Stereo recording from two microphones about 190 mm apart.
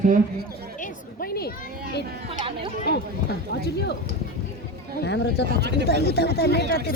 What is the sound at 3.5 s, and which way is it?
Speech, 60° left (ahead or behind).